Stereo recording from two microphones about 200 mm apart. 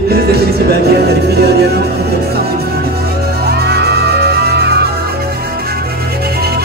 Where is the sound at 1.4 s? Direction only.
55° right (ahead or behind).